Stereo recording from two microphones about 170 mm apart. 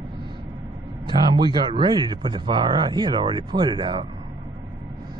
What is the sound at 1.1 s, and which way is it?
Speech, 25° right (ahead or behind).